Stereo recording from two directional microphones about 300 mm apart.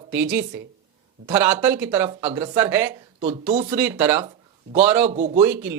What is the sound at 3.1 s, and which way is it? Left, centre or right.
Speech, right.